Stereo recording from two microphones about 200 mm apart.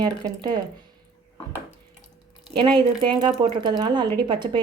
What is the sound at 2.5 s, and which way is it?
Speech, 25° right (ahead or behind).